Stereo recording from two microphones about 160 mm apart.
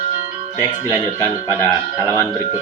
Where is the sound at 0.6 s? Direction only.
15° left (ahead or behind).